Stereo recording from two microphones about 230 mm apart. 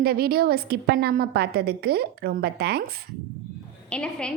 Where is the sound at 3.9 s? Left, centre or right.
Centre.